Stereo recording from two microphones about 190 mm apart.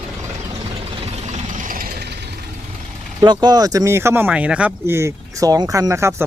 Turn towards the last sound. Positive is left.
turn(degrees=-15)  # may be behind; listen again after turning